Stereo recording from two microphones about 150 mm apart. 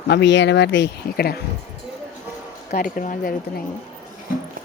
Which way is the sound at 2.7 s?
65° left (ahead or behind).